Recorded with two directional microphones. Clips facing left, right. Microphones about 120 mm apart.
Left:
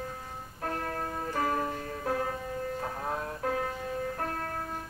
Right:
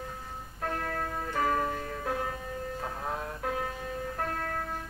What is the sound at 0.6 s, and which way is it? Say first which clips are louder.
Music: right 1 dB; 35° left (ahead or behind).